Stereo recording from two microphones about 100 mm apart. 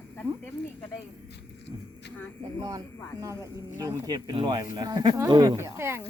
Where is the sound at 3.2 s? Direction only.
35° right (ahead or behind).